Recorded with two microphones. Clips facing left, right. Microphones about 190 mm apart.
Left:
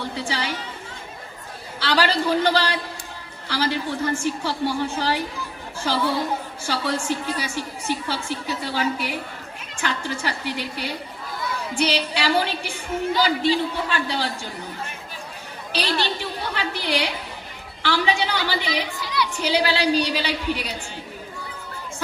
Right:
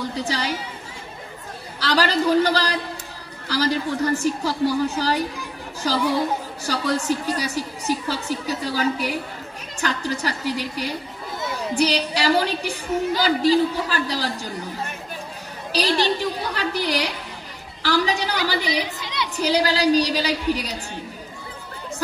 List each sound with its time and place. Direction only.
0.1 s a woman's voice: 40° right (ahead or behind)
1.8 s a woman's voice: 40° right (ahead or behind)
6.6 s a woman's voice: 40° right (ahead or behind)
15.7 s a woman's voice: 40° right (ahead or behind)
18.9 s chatter: 20° right (ahead or behind)
19.3 s a woman's voice: 40° right (ahead or behind)